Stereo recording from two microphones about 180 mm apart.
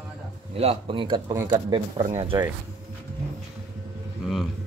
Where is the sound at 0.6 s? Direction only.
30° right (ahead or behind).